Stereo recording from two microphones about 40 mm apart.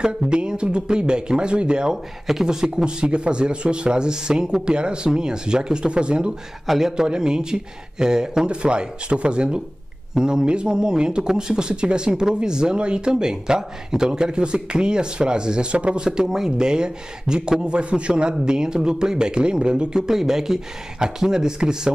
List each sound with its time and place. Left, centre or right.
0.0 s speech: right